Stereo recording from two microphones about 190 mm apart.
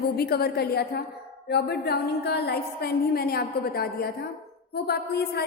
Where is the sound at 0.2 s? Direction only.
55° left (ahead or behind).